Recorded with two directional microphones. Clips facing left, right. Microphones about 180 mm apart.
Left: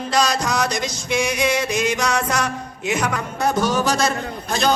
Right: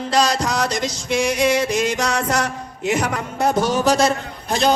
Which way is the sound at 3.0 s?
30° right (ahead or behind).